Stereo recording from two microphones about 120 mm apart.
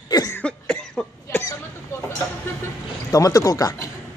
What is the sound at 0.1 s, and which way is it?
Cough, 30° left (ahead or behind).